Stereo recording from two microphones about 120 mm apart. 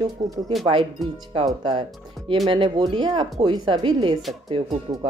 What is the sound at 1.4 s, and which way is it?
A woman's voice, 40° right (ahead or behind).